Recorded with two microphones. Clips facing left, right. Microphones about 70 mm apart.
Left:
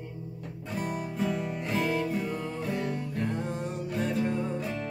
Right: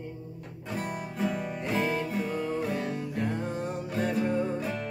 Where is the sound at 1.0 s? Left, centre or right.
Centre.